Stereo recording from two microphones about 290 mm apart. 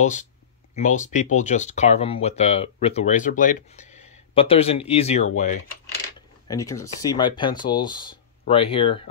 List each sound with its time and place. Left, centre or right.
0.0 s speech: left
6.4 s speech: centre